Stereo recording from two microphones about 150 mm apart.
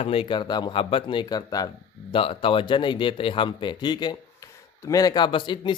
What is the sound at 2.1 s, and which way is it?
Speech, 35° left (ahead or behind).